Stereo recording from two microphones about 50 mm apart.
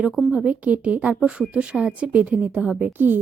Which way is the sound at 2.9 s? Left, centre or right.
Right.